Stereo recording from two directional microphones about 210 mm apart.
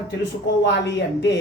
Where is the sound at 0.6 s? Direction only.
55° left (ahead or behind).